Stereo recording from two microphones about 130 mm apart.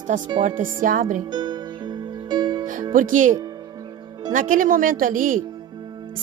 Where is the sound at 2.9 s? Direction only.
85° right.